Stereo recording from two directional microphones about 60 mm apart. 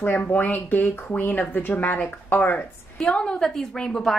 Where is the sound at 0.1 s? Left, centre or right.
Left.